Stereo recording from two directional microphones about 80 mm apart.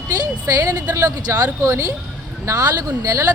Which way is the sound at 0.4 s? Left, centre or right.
Right.